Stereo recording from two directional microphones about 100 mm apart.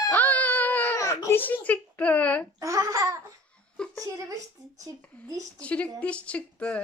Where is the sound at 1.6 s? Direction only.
15° left (ahead or behind).